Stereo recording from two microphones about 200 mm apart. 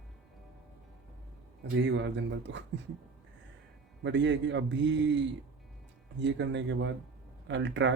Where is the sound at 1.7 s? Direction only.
65° right (ahead or behind).